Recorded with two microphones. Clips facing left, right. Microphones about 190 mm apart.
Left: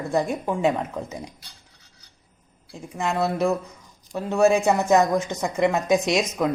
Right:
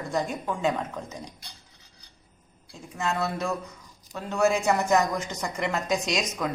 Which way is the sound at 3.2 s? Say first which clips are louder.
Left 6 dB; 30° left (ahead or behind).